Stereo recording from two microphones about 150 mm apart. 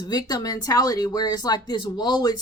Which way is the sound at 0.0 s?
25° left (ahead or behind).